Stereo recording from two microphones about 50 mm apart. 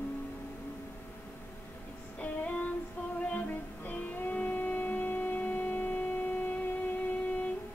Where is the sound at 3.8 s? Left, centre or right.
Left.